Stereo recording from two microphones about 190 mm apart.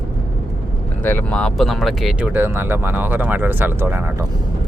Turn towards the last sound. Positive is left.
turn(degrees=-10)  # may be behind; listen again after turning